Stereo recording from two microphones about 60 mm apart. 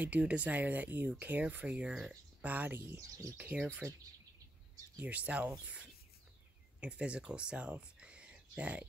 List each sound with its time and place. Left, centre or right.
0.0 s speech: right
3.0 s speech: right
3.3 s speech: right
5.0 s speech: right
6.8 s speech: centre